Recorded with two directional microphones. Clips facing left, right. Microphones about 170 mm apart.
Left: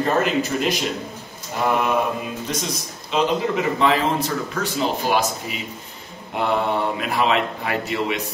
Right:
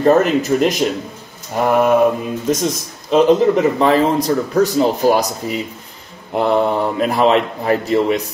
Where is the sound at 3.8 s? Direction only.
40° right (ahead or behind).